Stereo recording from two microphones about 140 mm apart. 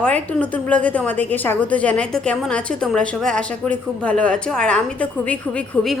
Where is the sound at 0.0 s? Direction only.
10° left (ahead or behind).